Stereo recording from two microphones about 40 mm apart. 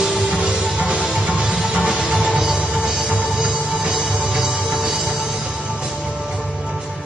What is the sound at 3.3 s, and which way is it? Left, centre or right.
Music, centre.